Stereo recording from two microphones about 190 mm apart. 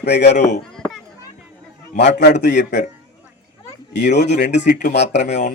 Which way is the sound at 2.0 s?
65° left (ahead or behind).